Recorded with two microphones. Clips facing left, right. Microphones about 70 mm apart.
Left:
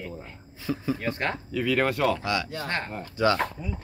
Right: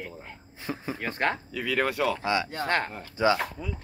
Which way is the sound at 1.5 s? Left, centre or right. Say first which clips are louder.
Left 3 dB; centre.